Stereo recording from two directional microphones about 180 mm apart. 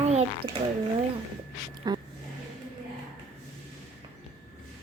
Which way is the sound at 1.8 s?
20° right (ahead or behind).